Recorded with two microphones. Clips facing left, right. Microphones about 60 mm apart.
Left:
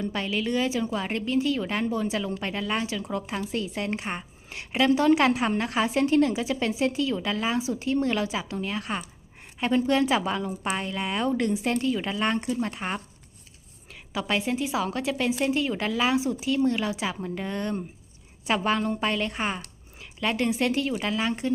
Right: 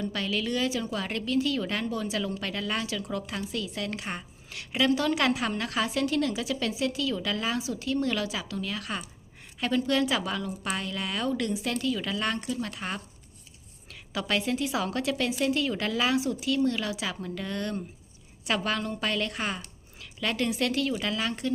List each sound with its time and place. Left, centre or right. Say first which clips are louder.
0.0 s a woman's voice: left 2 dB; centre
14.1 s a woman's voice: left 1 dB; centre